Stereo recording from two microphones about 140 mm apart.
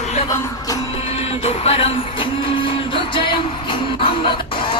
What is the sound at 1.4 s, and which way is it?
Music, 45° left (ahead or behind).